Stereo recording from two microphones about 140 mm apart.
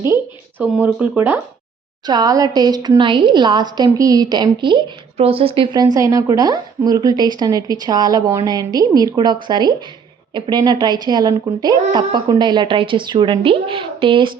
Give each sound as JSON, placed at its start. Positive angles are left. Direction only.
{"t": 0.6, "sound": "speech", "side_deg": -10}
{"t": 2.0, "sound": "a woman's voice", "side_deg": -25}